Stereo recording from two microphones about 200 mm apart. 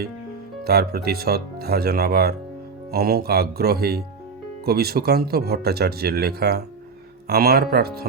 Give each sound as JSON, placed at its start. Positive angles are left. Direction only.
{"t": 0.6, "sound": "speech", "side_deg": -50}